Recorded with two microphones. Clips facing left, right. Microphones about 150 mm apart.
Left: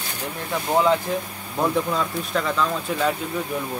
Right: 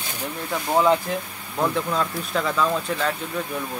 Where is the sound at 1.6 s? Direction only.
Centre (ahead or behind).